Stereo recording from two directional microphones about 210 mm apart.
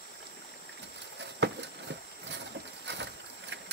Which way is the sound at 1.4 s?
55° right (ahead or behind).